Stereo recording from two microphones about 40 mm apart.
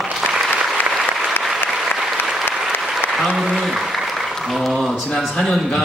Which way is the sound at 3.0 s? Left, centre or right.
Left.